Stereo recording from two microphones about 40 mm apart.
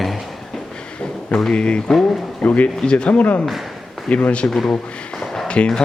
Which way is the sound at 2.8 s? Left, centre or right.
Left.